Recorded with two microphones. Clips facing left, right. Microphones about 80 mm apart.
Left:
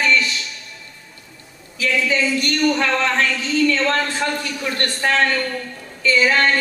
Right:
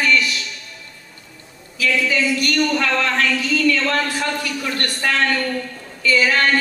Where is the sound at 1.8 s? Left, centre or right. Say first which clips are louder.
Even; left.